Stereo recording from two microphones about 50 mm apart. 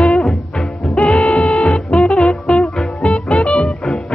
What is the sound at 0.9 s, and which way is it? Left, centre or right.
Music, left.